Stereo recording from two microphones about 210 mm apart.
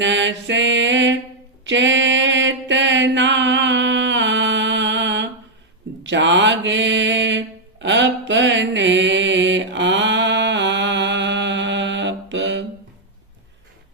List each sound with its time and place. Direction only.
0.0 s mantra: 60° right (ahead or behind)